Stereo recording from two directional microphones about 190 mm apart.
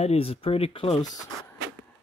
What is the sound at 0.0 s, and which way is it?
Speech, 30° left (ahead or behind).